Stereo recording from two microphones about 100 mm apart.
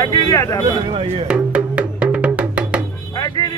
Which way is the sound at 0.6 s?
65° right (ahead or behind).